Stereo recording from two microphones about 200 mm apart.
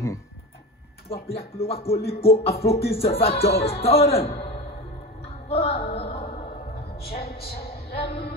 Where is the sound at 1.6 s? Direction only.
30° left (ahead or behind).